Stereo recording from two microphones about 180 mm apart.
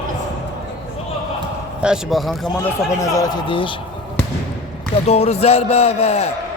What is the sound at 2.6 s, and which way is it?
A man's voice, 20° left (ahead or behind).